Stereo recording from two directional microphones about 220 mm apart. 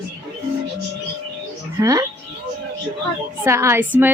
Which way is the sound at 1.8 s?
15° right (ahead or behind).